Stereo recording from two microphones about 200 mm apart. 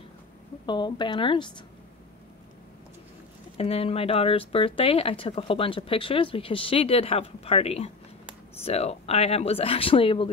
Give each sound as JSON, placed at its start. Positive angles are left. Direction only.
{"t": 0.7, "sound": "speech", "side_deg": 20}
{"t": 3.5, "sound": "speech", "side_deg": 30}